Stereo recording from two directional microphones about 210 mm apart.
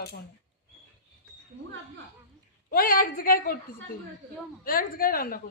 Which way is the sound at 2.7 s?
45° left (ahead or behind).